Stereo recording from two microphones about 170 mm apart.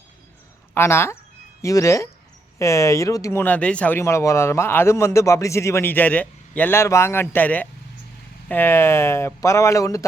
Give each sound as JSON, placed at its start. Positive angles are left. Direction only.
{"t": 0.7, "sound": "speech", "side_deg": 15}